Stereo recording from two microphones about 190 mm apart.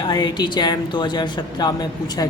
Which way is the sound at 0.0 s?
20° left (ahead or behind).